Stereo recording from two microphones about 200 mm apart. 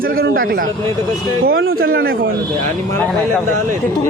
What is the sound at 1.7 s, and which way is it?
A man's voice, 45° right (ahead or behind).